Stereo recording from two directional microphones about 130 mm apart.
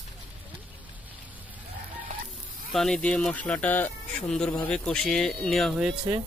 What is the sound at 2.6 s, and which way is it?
Speech, 5° left (ahead or behind).